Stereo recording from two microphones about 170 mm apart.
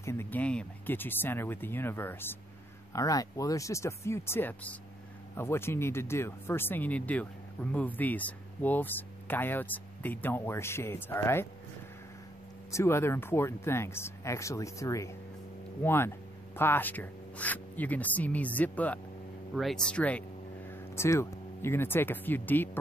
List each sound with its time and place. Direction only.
0.0 s speech: 15° left (ahead or behind)
12.7 s speech: 15° left (ahead or behind)